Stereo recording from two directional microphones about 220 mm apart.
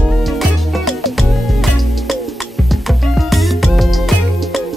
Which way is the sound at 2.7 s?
Centre (ahead or behind).